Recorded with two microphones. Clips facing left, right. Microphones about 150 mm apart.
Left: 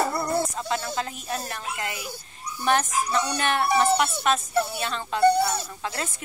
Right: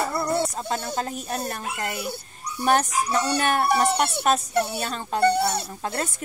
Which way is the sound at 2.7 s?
40° right (ahead or behind).